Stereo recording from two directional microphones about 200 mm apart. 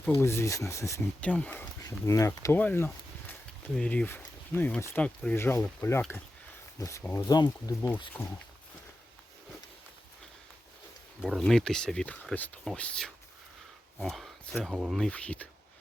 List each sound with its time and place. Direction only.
0.2 s speech: 15° left (ahead or behind)
11.2 s speech: centre (ahead or behind)